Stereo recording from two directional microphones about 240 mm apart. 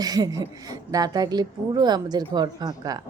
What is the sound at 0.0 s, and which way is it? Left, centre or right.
A woman's voice, centre.